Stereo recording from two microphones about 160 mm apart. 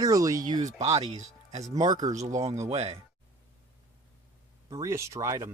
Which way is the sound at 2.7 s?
40° right (ahead or behind).